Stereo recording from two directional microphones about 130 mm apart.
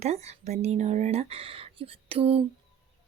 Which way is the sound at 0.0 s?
55° right (ahead or behind).